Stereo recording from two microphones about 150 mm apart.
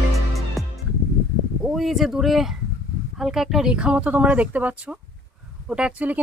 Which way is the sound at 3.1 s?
Centre (ahead or behind).